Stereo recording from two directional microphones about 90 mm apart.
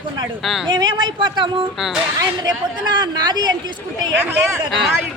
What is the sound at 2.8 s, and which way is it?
Speech, 55° right (ahead or behind).